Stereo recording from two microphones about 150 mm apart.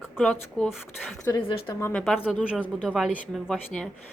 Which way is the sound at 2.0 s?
Centre (ahead or behind).